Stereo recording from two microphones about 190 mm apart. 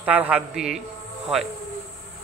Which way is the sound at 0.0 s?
10° right (ahead or behind).